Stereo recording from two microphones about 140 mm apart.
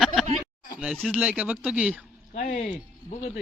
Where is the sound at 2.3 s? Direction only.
65° left (ahead or behind).